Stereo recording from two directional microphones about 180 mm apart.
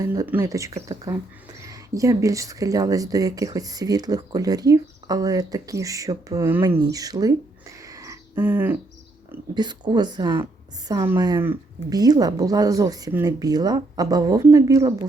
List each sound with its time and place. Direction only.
0.0 s speech: 20° right (ahead or behind)
7.9 s bird: 20° right (ahead or behind)
9.6 s speech: 25° right (ahead or behind)